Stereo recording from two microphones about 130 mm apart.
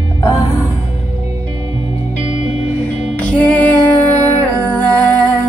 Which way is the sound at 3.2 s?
10° left (ahead or behind).